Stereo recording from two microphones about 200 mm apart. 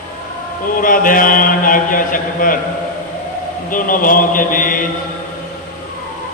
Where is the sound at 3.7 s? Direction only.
45° left (ahead or behind).